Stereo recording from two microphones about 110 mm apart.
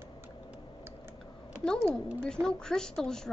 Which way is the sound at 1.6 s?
5° left (ahead or behind).